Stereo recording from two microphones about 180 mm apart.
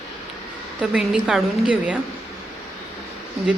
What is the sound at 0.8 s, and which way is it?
A woman's voice, 5° right (ahead or behind).